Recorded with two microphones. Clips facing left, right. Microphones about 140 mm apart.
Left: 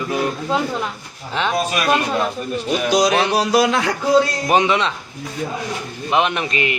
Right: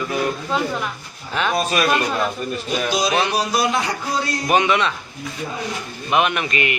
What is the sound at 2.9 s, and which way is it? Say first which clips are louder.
Speech: left 4 dB; 90° left.